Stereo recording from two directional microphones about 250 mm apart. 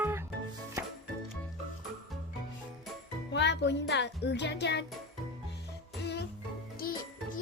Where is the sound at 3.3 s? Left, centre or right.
Left.